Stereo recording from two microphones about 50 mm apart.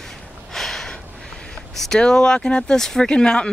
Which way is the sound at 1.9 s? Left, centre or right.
Centre.